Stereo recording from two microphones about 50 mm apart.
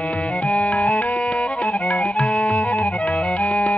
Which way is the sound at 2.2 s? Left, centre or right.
Centre.